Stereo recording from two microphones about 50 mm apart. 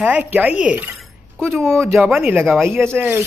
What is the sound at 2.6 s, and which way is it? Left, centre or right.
Speech, right.